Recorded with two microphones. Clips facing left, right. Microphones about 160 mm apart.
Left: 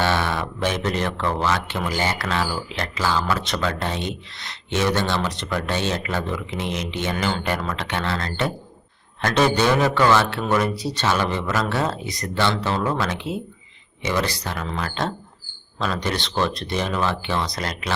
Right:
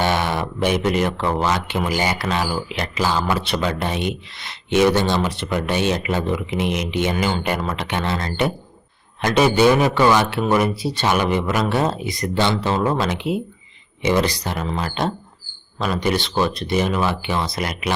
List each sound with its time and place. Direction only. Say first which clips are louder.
0.0 s speech: right 2 dB; 15° right (ahead or behind)